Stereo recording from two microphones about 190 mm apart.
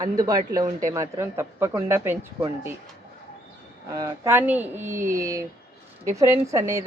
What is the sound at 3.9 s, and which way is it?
Speech, 15° right (ahead or behind).